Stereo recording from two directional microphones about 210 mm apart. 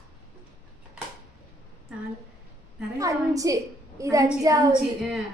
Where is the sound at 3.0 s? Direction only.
15° right (ahead or behind).